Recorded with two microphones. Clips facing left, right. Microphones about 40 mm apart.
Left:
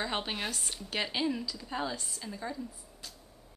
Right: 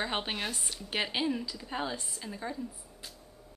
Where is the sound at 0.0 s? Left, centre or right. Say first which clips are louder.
Right 1 dB; centre.